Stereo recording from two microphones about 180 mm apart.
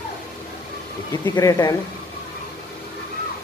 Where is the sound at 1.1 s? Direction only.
20° left (ahead or behind).